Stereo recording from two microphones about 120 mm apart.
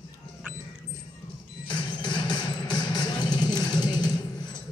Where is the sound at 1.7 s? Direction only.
40° left (ahead or behind).